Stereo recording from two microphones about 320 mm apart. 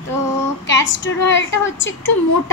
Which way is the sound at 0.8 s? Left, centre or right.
Left.